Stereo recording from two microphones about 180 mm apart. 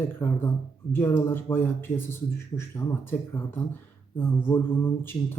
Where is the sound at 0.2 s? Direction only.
15° left (ahead or behind).